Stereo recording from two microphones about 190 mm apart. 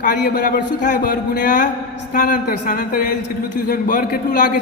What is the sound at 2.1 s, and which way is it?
A man's voice, 45° left (ahead or behind).